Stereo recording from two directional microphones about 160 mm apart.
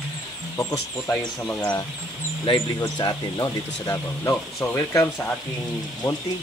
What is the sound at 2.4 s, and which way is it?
Speech, 30° left (ahead or behind).